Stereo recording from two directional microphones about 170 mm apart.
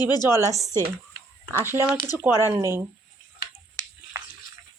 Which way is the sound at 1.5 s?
15° right (ahead or behind).